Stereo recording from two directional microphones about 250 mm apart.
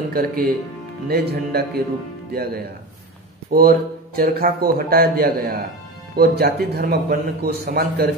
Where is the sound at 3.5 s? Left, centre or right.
Right.